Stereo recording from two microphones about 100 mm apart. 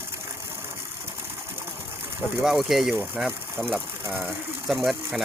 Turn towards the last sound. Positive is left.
turn(degrees=0)  # may be behind; listen again after turning